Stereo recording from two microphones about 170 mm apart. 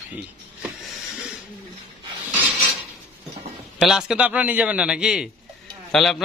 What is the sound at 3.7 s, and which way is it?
A man's voice, centre (ahead or behind).